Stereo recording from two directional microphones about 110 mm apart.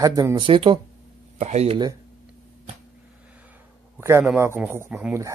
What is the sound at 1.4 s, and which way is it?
Speech, 80° right.